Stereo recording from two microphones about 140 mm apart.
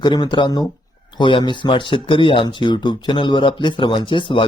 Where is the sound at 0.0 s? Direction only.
30° left (ahead or behind).